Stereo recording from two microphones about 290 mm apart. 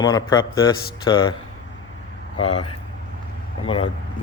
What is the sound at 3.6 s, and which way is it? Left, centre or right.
Speech, centre.